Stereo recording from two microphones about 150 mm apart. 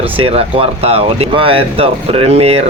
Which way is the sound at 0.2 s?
40° right (ahead or behind).